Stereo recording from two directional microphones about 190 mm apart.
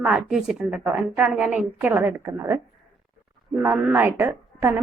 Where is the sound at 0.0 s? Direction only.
5° right (ahead or behind).